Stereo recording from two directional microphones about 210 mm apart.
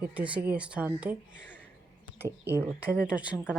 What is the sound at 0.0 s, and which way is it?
A woman's voice, 5° right (ahead or behind).